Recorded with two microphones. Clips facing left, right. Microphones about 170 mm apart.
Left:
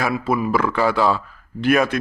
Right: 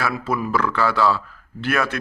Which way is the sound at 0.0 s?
10° left (ahead or behind).